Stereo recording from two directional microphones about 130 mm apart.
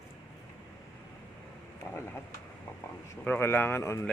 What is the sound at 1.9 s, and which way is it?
Speech, 20° left (ahead or behind).